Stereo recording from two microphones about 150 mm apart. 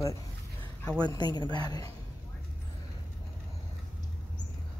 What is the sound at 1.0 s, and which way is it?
Speech, 25° left (ahead or behind).